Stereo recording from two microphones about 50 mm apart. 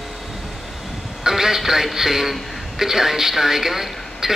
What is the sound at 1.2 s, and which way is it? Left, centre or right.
A man's voice, centre.